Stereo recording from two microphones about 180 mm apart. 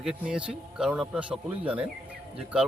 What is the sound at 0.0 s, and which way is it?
Speech, 5° right (ahead or behind).